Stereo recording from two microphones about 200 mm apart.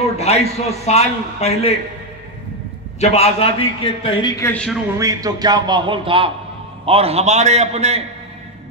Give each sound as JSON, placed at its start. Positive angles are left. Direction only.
{"t": 0.2, "sound": "a man's voice", "side_deg": 30}
{"t": 3.0, "sound": "a man's voice", "side_deg": 30}
{"t": 4.2, "sound": "speech", "side_deg": 10}
{"t": 4.9, "sound": "a man's voice", "side_deg": -15}